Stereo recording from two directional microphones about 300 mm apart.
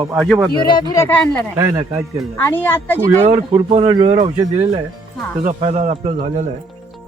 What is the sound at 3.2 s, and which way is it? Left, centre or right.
Speech, right.